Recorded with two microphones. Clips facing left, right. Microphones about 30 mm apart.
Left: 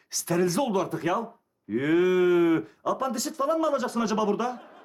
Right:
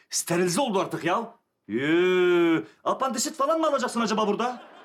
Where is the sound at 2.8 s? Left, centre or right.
Right.